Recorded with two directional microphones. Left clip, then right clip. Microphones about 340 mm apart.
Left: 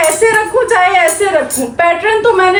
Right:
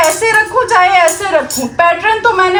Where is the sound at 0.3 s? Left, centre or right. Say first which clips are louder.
Even; centre.